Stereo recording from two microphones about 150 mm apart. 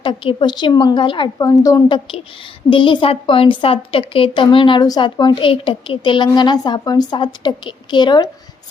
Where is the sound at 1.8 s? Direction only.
35° left (ahead or behind).